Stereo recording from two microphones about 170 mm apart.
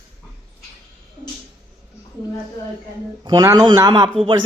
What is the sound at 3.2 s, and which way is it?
A man's voice, 25° right (ahead or behind).